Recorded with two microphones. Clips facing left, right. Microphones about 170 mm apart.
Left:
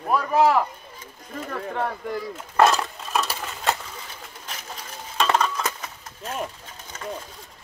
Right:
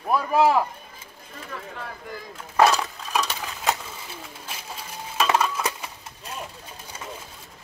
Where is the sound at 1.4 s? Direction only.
55° left (ahead or behind).